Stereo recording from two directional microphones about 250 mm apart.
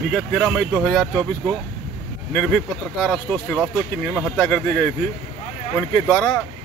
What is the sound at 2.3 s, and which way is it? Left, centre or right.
Speech, centre.